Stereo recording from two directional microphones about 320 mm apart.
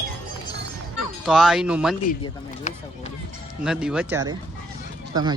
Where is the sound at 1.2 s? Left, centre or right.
Centre.